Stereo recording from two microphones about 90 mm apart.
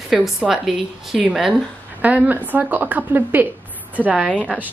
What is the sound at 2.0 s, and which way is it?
A woman's voice, 15° right (ahead or behind).